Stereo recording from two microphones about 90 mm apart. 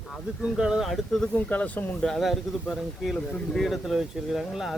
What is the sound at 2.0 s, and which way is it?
Speech, 5° left (ahead or behind).